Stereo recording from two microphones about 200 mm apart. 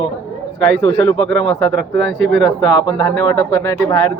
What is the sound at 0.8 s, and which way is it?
Speech, 25° left (ahead or behind).